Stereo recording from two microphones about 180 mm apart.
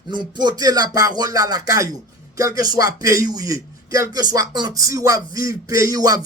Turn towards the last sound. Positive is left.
turn(degrees=-20)  # may be behind; listen again after turning